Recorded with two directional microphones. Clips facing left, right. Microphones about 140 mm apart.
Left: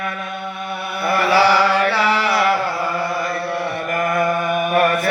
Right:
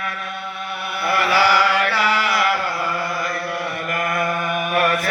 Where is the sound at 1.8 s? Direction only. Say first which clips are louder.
Left 3 dB; 30° left (ahead or behind).